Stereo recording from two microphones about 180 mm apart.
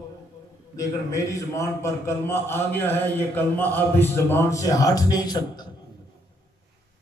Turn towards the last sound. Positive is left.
turn(degrees=20)  # may be behind; listen again after turning